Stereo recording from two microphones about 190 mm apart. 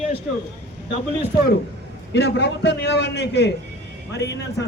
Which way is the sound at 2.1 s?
65° left (ahead or behind).